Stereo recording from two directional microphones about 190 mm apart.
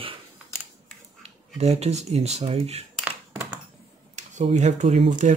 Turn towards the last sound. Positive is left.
turn(degrees=-40)  # may be behind; listen again after turning